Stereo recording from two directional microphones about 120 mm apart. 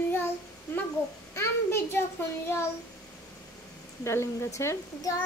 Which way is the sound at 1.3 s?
20° left (ahead or behind).